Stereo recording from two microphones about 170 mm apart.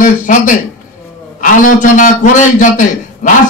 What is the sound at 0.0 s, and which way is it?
A man's voice, 50° left (ahead or behind).